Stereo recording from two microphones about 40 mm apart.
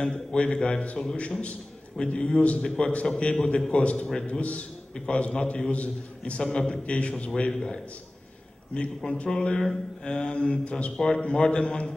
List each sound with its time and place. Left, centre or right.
0.0 s a man's voice: left
6.4 s a man's voice: left
7.5 s a man's voice: centre